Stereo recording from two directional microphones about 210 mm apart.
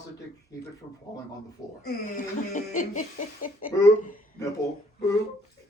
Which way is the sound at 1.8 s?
35° left (ahead or behind).